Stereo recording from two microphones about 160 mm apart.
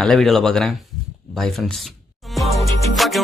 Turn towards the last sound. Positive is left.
turn(degrees=0)  # may be behind; listen again after turning